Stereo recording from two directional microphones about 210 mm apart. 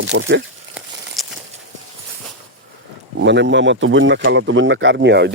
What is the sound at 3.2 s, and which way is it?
Speech, 55° right (ahead or behind).